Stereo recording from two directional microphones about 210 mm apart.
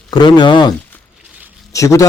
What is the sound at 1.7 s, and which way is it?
Speech, 15° left (ahead or behind).